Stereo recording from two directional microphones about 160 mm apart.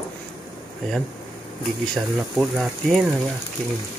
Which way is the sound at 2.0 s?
5° right (ahead or behind).